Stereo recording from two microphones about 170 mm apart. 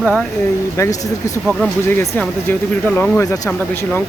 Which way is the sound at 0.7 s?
20° left (ahead or behind).